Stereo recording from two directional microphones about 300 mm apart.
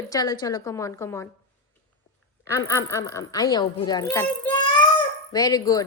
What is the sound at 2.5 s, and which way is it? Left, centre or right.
A woman's voice, centre.